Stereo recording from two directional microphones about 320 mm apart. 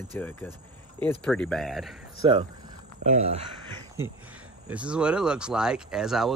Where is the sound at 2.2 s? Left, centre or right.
Centre.